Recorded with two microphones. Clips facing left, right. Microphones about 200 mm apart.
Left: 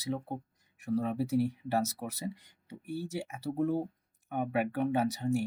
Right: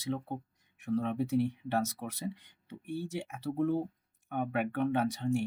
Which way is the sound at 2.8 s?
40° left (ahead or behind).